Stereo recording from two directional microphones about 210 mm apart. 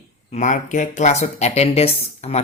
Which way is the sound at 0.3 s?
35° left (ahead or behind).